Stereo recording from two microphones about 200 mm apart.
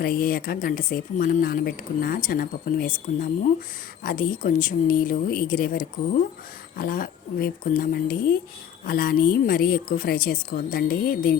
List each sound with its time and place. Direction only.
0.0 s speech: 45° left (ahead or behind)